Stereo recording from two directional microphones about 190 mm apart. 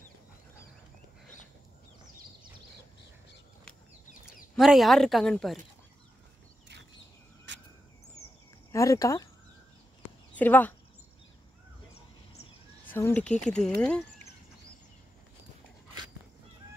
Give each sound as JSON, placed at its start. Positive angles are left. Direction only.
{"t": 4.6, "sound": "speech", "side_deg": 0}
{"t": 7.5, "sound": "cricket", "side_deg": -70}
{"t": 8.7, "sound": "speech", "side_deg": 15}
{"t": 10.3, "sound": "speech", "side_deg": 10}
{"t": 12.8, "sound": "speech", "side_deg": 10}